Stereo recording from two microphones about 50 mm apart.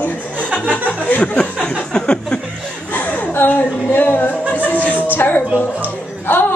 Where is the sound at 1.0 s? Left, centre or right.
Left.